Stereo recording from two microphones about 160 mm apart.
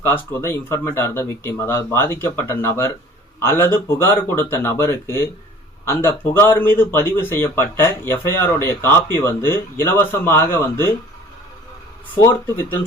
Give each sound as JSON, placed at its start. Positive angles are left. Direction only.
{"t": 0.1, "sound": "a man's voice", "side_deg": 15}
{"t": 12.2, "sound": "a man's voice", "side_deg": 15}